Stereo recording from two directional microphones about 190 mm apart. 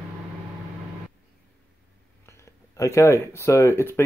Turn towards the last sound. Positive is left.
turn(degrees=15)  # may be behind; listen again after turning